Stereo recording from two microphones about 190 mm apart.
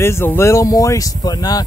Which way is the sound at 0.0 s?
10° left (ahead or behind).